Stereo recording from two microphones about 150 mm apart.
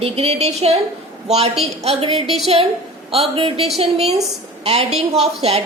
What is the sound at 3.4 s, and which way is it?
A woman's voice, 40° right (ahead or behind).